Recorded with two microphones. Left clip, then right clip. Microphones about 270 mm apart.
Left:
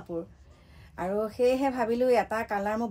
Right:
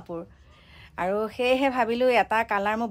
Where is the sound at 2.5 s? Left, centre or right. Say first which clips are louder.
Right 4 dB; right.